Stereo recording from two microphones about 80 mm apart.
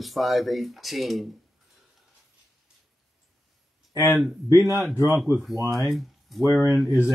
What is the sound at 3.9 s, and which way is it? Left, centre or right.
Speech, left.